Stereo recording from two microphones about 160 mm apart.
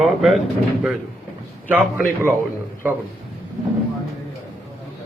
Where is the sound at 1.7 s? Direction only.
10° right (ahead or behind).